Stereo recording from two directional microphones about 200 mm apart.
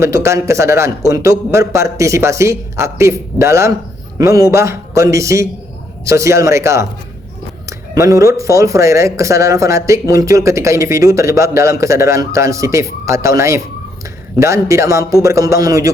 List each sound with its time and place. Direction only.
0.0 s speech: 15° right (ahead or behind)